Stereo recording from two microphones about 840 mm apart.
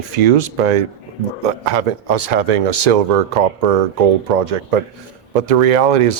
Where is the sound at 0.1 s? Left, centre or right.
Right.